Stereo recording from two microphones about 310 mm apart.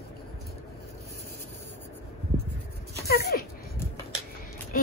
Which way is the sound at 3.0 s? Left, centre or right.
Left.